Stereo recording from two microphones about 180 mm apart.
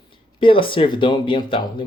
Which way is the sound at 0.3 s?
30° left (ahead or behind).